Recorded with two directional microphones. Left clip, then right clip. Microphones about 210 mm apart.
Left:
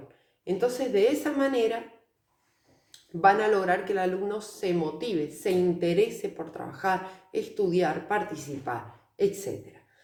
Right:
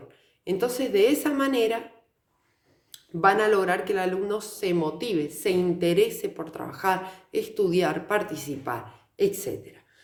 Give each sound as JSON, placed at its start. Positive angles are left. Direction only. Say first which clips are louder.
{"t": 0.4, "sound": "speech", "louder": "right 1 dB", "side_deg": -50}
{"t": 2.9, "sound": "speech", "louder": "even", "side_deg": -50}